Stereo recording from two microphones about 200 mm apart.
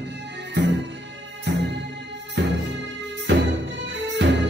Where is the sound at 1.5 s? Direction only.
60° right (ahead or behind).